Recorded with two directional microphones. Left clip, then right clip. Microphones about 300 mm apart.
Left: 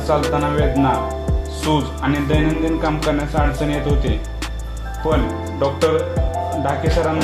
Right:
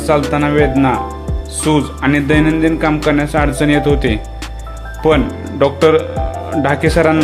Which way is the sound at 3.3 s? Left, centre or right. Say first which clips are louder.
Right 7 dB; right.